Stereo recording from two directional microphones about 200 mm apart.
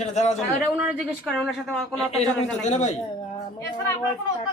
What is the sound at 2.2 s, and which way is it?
Speech, 35° left (ahead or behind).